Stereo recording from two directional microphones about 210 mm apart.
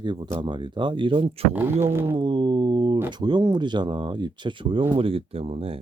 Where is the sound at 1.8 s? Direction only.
10° right (ahead or behind).